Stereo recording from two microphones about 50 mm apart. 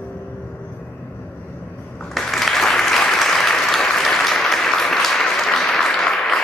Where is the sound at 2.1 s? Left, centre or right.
Centre.